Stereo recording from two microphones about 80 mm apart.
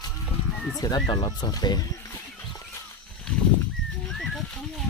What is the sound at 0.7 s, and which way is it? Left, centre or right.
Speech, left.